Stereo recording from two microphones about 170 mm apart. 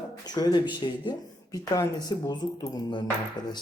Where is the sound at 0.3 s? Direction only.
25° left (ahead or behind).